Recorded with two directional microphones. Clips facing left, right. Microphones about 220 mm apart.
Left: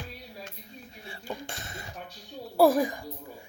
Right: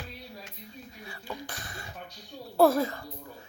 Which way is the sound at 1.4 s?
25° left (ahead or behind).